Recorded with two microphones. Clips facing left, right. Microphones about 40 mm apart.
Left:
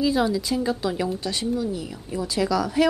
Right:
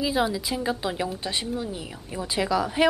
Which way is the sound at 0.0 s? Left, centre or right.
Centre.